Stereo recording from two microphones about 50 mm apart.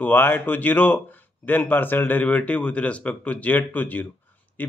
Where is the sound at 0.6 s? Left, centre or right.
Left.